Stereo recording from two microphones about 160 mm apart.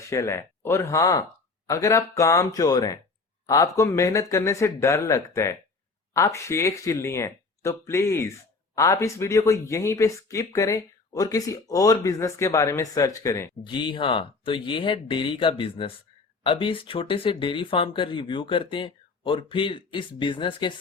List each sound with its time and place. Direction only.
0.1 s speech: 15° left (ahead or behind)
13.7 s speech: 30° left (ahead or behind)